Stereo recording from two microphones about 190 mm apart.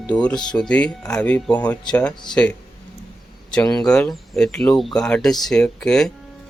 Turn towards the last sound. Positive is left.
turn(degrees=5)  # may be behind; listen again after turning